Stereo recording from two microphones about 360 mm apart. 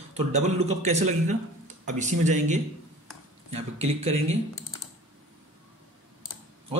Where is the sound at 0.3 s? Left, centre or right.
Centre.